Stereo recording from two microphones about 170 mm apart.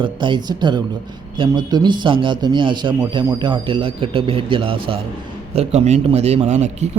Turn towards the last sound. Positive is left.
turn(degrees=-40)  # may be behind; listen again after turning